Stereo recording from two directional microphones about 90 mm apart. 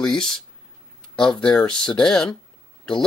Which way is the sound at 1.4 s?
60° left (ahead or behind).